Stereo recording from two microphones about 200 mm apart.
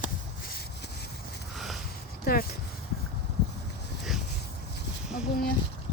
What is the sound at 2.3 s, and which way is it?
Speech, 50° left (ahead or behind).